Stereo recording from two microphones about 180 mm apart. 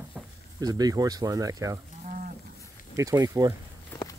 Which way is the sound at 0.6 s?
20° right (ahead or behind).